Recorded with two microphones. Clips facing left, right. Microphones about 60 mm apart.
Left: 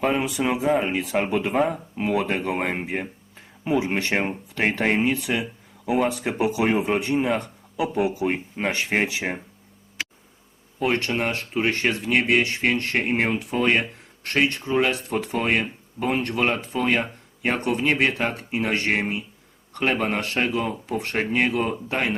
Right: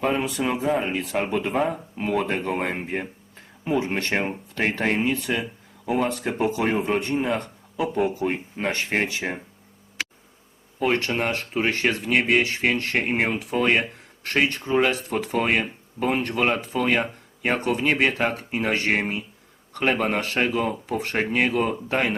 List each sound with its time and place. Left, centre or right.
0.0 s speech: centre
10.8 s speech: centre